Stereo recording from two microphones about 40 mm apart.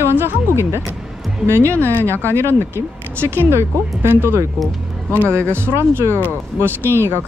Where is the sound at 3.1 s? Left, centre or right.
Right.